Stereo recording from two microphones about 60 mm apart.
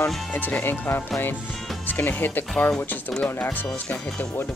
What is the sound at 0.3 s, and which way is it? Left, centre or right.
Speech, left.